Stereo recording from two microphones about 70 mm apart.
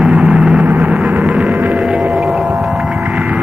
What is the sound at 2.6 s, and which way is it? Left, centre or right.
Vehicle, centre.